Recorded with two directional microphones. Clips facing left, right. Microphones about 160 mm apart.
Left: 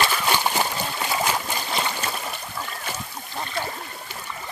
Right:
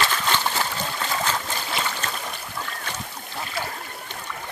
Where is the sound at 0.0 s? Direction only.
10° left (ahead or behind).